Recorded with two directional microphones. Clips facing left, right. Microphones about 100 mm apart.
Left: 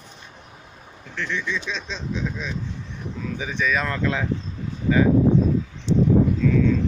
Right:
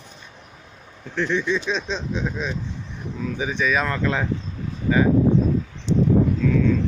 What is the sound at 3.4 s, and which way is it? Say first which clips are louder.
Speech: right 2 dB; 15° right (ahead or behind).